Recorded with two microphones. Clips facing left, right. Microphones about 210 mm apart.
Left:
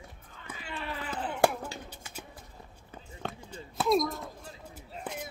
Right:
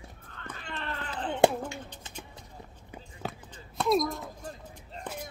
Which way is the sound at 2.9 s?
5° right (ahead or behind).